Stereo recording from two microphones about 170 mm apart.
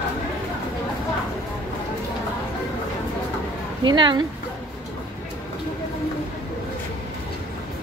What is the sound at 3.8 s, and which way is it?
Speech, 30° right (ahead or behind).